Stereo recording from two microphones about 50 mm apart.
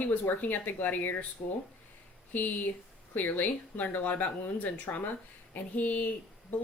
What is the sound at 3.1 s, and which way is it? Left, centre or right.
Speech, left.